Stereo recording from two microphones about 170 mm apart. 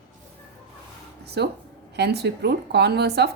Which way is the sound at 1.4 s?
80° right.